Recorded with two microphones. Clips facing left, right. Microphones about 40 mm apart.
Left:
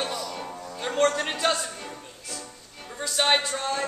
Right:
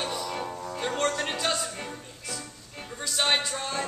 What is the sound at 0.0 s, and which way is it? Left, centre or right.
Music, centre.